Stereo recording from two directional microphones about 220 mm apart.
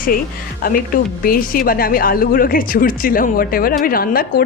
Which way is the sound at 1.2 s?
40° left (ahead or behind).